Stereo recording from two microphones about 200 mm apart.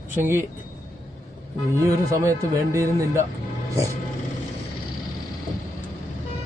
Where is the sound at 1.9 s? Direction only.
15° right (ahead or behind).